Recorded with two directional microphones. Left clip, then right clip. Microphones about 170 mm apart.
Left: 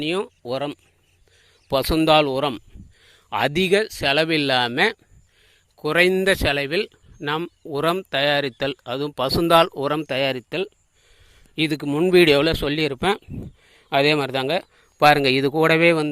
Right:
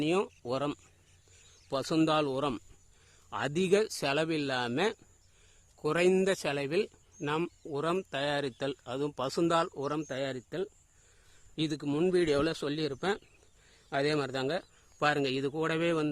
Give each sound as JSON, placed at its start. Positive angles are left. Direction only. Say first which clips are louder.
{"t": 0.0, "sound": "speech", "louder": "left 6 dB", "side_deg": 10}
{"t": 1.7, "sound": "speech", "louder": "left 12 dB", "side_deg": 25}
{"t": 4.1, "sound": "speech", "louder": "left 15 dB", "side_deg": 20}
{"t": 12.1, "sound": "speech", "louder": "left 17 dB", "side_deg": 30}